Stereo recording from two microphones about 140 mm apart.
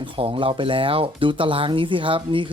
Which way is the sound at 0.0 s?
40° right (ahead or behind).